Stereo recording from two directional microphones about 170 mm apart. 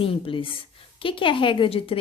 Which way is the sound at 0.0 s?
30° left (ahead or behind).